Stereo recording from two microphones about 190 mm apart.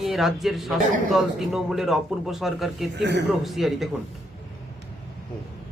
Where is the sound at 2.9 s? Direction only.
65° right (ahead or behind).